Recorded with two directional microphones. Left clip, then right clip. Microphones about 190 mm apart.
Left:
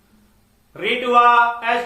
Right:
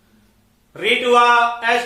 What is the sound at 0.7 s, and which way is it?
Speech, 15° right (ahead or behind).